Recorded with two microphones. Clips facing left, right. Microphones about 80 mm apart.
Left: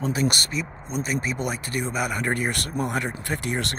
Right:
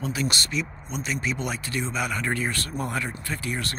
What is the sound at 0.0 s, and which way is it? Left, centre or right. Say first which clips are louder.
Speech: left 4 dB; left.